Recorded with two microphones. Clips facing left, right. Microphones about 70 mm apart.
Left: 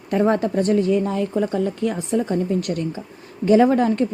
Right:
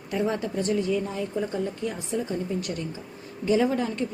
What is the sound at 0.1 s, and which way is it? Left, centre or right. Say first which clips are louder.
Speech: left 8 dB; left.